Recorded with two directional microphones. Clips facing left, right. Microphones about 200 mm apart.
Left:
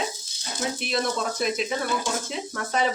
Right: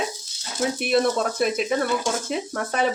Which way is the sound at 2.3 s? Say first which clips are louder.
Right 4 dB; 55° right (ahead or behind).